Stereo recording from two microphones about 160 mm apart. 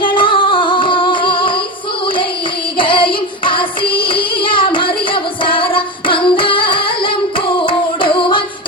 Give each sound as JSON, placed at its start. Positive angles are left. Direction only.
{"t": 0.0, "sound": "music", "side_deg": 30}
{"t": 2.7, "sound": "music", "side_deg": 30}